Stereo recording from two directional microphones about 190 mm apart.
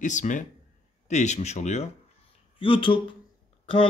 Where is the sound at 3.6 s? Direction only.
30° left (ahead or behind).